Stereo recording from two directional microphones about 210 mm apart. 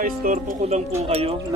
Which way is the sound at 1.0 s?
30° right (ahead or behind).